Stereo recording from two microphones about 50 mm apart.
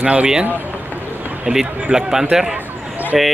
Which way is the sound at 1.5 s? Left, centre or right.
Right.